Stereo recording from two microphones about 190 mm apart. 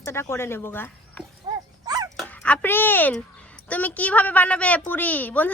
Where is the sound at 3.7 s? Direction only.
10° left (ahead or behind).